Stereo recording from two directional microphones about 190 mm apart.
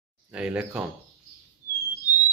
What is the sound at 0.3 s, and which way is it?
Speech, 5° right (ahead or behind).